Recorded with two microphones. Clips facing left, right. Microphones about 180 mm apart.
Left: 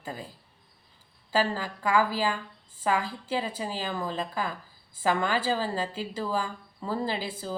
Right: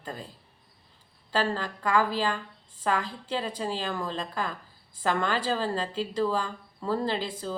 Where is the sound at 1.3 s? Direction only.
5° left (ahead or behind).